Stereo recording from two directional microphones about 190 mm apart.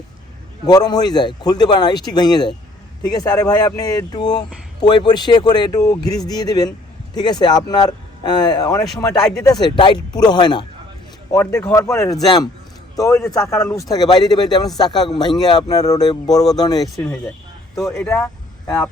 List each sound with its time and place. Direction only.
0.7 s speech: 20° left (ahead or behind)
17.9 s speech: 5° left (ahead or behind)